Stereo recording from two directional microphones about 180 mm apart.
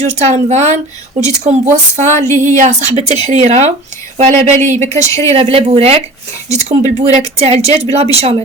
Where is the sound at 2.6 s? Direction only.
40° right (ahead or behind).